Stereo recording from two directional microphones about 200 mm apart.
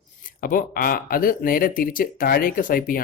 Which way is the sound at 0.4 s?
45° left (ahead or behind).